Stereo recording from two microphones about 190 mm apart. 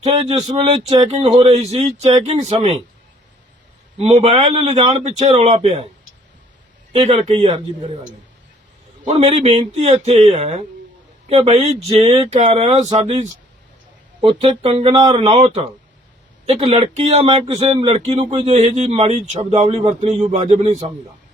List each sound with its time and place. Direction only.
0.0 s speech: 35° right (ahead or behind)
4.0 s speech: 30° right (ahead or behind)
6.9 s a man's voice: 30° right (ahead or behind)
9.0 s speech: 35° right (ahead or behind)